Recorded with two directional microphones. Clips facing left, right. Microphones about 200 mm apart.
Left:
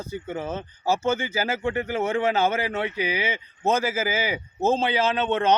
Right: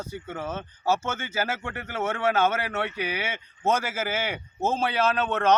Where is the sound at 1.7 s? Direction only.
10° left (ahead or behind).